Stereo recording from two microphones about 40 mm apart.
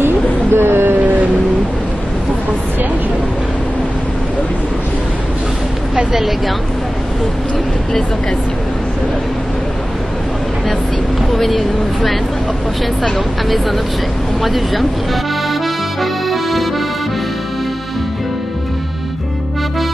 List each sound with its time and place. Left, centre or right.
0.0 s a sound: right
6.1 s a woman's voice: centre
11.3 s a woman's voice: centre
16.0 s accordion: centre